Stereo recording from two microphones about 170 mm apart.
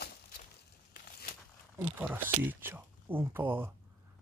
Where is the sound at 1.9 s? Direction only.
10° right (ahead or behind).